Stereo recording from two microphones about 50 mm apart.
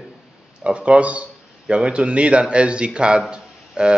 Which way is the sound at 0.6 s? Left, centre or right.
Right.